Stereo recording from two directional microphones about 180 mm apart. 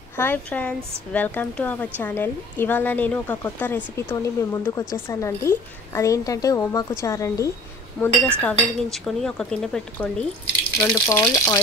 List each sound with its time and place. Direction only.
0.1 s a woman's voice: 10° left (ahead or behind)
8.0 s a woman's voice: 5° left (ahead or behind)
11.1 s speech: 15° left (ahead or behind)